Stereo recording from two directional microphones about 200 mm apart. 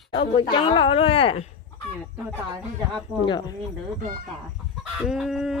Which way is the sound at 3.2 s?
20° left (ahead or behind).